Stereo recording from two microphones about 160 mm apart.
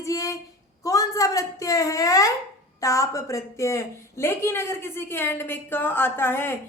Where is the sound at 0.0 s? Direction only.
20° left (ahead or behind).